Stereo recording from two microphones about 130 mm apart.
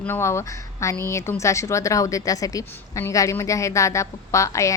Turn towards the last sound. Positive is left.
turn(degrees=25)  # may be behind; listen again after turning